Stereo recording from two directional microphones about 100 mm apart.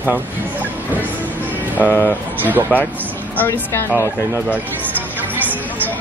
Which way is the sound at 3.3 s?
20° left (ahead or behind).